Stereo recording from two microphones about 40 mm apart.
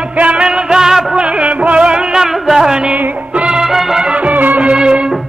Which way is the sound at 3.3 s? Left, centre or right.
Right.